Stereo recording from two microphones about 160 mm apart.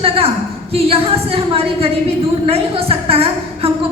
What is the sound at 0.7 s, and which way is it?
A woman's voice, 40° right (ahead or behind).